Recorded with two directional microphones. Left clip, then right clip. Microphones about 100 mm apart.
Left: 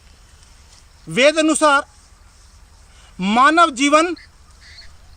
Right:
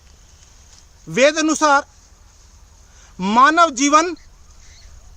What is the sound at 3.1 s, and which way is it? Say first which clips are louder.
Speech: even; 25° right (ahead or behind).